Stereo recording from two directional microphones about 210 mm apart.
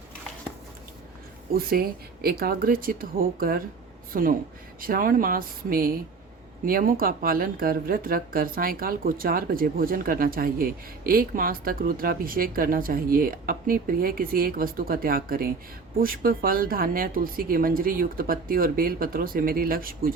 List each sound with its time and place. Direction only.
1.5 s speech: 45° right (ahead or behind)